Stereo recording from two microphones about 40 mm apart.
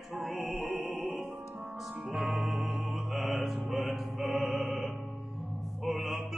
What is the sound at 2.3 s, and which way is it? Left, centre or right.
Music, centre.